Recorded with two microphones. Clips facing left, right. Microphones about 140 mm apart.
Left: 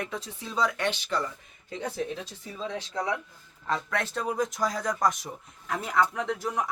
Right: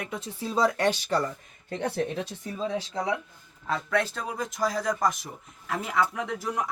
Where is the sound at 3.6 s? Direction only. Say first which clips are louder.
Right 3 dB; 5° right (ahead or behind).